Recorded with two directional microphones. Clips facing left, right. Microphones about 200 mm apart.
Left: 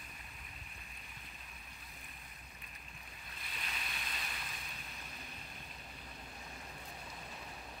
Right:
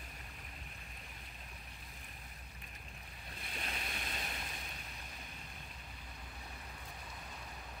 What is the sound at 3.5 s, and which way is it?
Boat, 45° right (ahead or behind).